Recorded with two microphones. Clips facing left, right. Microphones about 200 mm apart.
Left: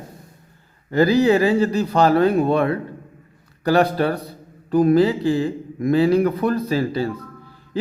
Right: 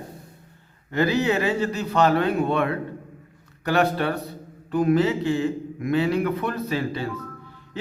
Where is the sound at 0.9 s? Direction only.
35° left (ahead or behind).